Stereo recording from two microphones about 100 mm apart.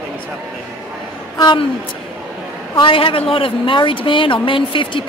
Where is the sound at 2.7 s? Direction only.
60° left (ahead or behind).